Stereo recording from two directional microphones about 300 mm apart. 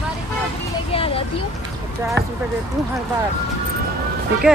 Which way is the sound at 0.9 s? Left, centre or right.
Centre.